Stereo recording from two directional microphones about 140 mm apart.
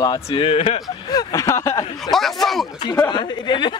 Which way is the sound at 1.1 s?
25° left (ahead or behind).